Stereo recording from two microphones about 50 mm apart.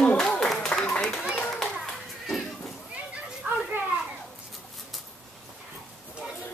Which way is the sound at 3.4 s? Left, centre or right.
Right.